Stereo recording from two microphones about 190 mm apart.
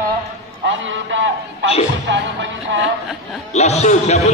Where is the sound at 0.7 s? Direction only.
75° right (ahead or behind).